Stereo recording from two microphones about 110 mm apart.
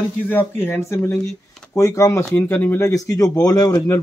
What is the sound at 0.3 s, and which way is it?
Speech, 20° left (ahead or behind).